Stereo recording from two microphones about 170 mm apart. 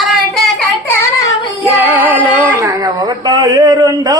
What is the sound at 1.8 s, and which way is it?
Music, 10° right (ahead or behind).